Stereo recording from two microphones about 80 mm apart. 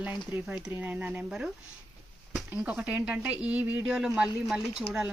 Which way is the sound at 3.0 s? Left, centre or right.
Centre.